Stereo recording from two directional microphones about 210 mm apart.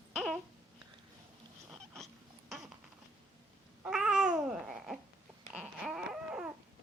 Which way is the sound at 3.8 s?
5° right (ahead or behind).